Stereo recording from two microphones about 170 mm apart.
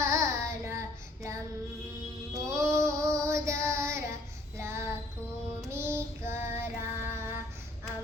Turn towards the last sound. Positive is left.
turn(degrees=-15)  # may be behind; listen again after turning